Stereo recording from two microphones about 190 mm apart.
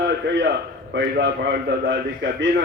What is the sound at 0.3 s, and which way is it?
A man's voice, 65° right (ahead or behind).